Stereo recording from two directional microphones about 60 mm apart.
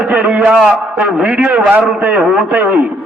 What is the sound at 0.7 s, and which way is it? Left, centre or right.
A man's voice, right.